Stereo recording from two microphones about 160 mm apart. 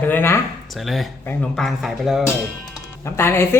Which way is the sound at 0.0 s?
15° left (ahead or behind).